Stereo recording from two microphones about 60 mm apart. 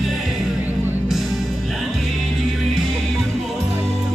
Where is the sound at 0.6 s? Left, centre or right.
Right.